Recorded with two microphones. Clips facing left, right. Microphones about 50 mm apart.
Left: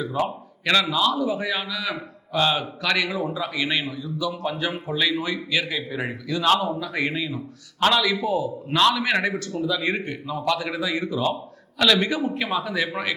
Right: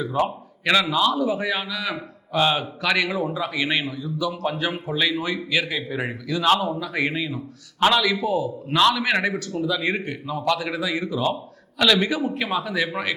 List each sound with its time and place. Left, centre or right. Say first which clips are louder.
0.3 s a man's voice: right 1 dB; centre
4.4 s a man's voice: right 1 dB; centre
5.2 s a man's voice: right 1 dB; centre
5.5 s a man's voice: right 2 dB; centre